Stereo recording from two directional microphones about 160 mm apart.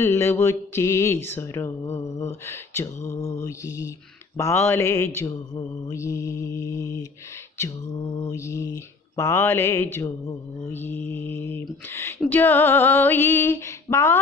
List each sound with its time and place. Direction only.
0.0 s mantra: 15° left (ahead or behind)
8.2 s mantra: 20° left (ahead or behind)